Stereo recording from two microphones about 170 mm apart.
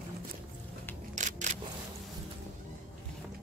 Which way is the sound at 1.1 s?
45° right (ahead or behind).